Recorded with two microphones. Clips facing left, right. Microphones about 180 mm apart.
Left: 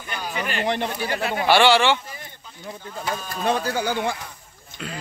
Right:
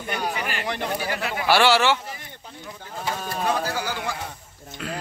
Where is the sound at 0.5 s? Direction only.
25° left (ahead or behind).